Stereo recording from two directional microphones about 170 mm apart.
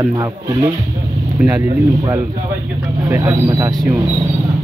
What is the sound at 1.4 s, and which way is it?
Speech, 15° right (ahead or behind).